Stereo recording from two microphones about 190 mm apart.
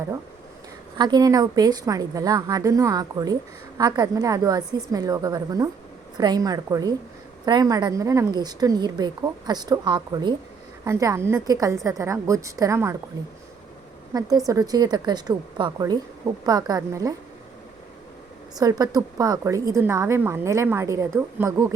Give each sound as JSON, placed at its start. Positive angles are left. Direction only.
{"t": 0.9, "sound": "a woman's voice", "side_deg": -20}
{"t": 14.1, "sound": "a woman's voice", "side_deg": -20}
{"t": 18.5, "sound": "a woman's voice", "side_deg": -20}